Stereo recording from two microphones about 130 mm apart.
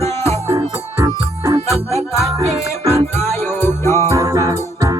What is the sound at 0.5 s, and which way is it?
Music, 35° right (ahead or behind).